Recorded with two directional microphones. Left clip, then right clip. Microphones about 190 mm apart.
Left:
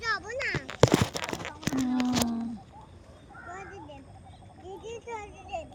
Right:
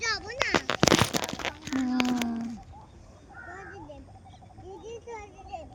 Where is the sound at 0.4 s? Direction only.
5° right (ahead or behind).